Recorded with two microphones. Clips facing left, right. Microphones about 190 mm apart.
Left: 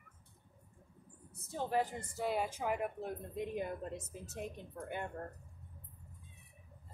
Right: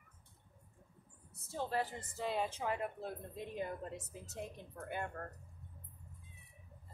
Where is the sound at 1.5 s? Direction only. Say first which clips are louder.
Left 3 dB; 15° left (ahead or behind).